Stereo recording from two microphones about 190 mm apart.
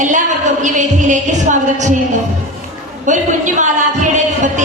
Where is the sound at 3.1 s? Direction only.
40° right (ahead or behind).